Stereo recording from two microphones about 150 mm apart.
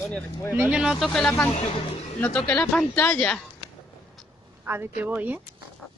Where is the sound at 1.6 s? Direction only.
40° left (ahead or behind).